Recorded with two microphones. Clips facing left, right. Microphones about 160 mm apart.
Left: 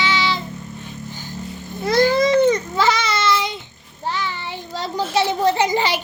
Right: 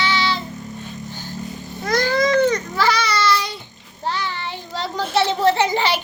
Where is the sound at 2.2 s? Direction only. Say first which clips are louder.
Left 2 dB; 25° left (ahead or behind).